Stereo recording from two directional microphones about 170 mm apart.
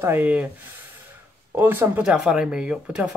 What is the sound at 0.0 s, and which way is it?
Speech, 10° right (ahead or behind).